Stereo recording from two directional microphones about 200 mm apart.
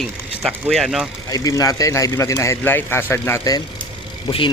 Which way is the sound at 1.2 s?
15° left (ahead or behind).